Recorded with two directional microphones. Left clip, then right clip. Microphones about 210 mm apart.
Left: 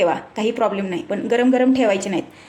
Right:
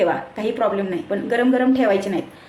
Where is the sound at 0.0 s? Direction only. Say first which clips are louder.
Left 1 dB; 40° left (ahead or behind).